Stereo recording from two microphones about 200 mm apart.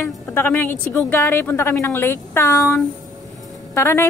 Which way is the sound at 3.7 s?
15° left (ahead or behind).